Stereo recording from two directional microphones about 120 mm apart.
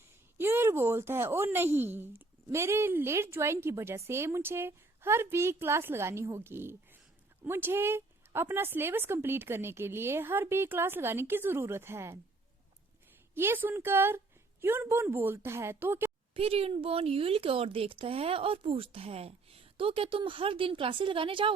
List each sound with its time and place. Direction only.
0.3 s speech: 20° right (ahead or behind)
13.3 s speech: 20° right (ahead or behind)
16.3 s speech: 55° right (ahead or behind)